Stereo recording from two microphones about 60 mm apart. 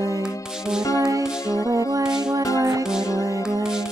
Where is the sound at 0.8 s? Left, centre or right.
Left.